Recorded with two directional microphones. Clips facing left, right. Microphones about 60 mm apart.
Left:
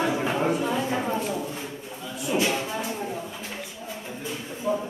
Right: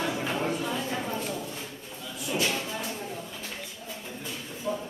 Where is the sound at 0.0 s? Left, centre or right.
Centre.